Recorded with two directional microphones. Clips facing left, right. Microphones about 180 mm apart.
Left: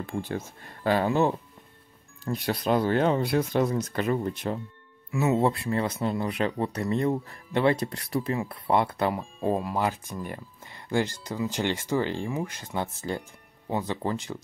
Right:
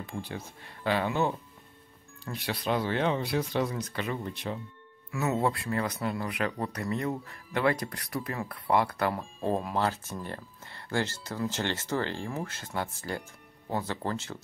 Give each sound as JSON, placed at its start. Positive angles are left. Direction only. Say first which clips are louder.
{"t": 0.0, "sound": "speech", "louder": "left 6 dB", "side_deg": 45}
{"t": 5.1, "sound": "speech", "louder": "left 4 dB", "side_deg": 20}
{"t": 9.4, "sound": "speech", "louder": "left 2 dB", "side_deg": 5}